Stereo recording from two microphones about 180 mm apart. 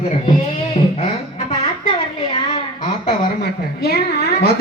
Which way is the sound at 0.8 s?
40° left (ahead or behind).